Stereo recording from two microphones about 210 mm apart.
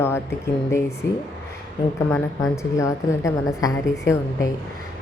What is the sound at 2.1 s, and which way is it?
A woman's voice, 15° left (ahead or behind).